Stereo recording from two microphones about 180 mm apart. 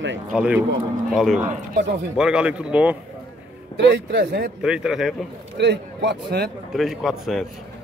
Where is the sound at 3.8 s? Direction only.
65° right (ahead or behind).